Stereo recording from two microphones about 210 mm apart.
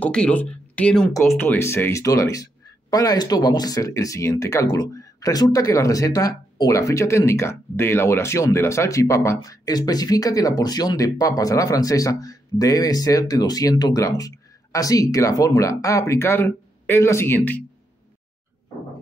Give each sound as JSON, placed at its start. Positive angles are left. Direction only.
{"t": 0.0, "sound": "speech", "side_deg": 5}